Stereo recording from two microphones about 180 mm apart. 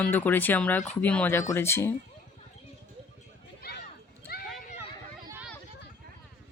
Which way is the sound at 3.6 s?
60° left (ahead or behind).